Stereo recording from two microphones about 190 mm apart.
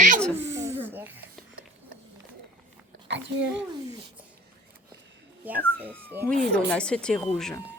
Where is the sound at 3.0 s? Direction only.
70° right (ahead or behind).